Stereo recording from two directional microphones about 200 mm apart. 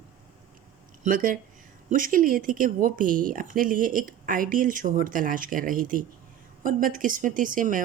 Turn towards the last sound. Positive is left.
turn(degrees=-40)  # may be behind; listen again after turning